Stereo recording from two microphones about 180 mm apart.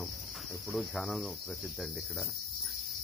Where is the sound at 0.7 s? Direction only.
Centre (ahead or behind).